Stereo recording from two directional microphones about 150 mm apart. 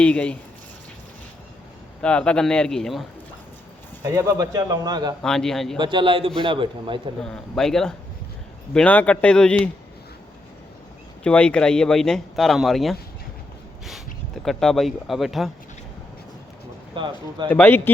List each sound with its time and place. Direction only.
0.0 s speech: 5° left (ahead or behind)
2.0 s speech: 5° left (ahead or behind)
4.0 s speech: 25° right (ahead or behind)
5.2 s speech: 5° left (ahead or behind)
5.7 s a man's voice: 30° right (ahead or behind)
7.2 s speech: 5° left (ahead or behind)
11.2 s speech: 5° left (ahead or behind)
14.4 s speech: centre (ahead or behind)
16.9 s a man's voice: 30° right (ahead or behind)
17.5 s speech: 15° left (ahead or behind)